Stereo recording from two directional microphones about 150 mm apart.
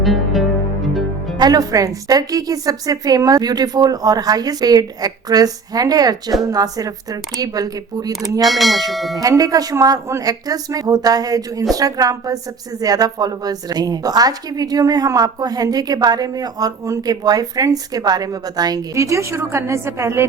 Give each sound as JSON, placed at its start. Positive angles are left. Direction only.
{"t": 0.0, "sound": "music", "side_deg": 0}
{"t": 1.4, "sound": "a woman's voice", "side_deg": -25}
{"t": 8.4, "sound": "speech", "side_deg": 0}
{"t": 9.1, "sound": "a woman's voice", "side_deg": -25}